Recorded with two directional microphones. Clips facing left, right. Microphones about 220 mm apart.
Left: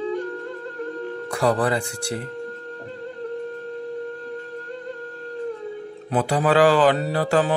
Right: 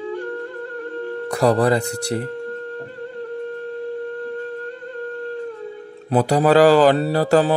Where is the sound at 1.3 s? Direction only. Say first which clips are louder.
Right 4 dB; 40° right (ahead or behind).